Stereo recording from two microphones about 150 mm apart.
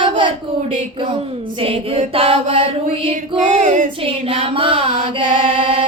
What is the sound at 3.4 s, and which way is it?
Female singing, 55° right (ahead or behind).